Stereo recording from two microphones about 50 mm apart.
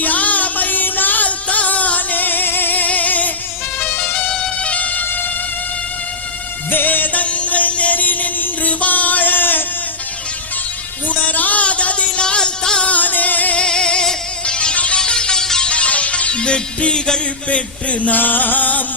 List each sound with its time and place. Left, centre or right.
0.0 s music: left
3.8 s emergency vehicle: left
6.7 s music: left
11.1 s music: left
12.2 s music: centre
12.8 s music: left
13.6 s music: centre
15.7 s music: left